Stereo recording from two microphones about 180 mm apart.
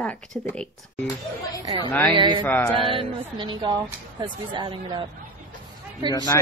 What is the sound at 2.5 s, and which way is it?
Speech, 5° left (ahead or behind).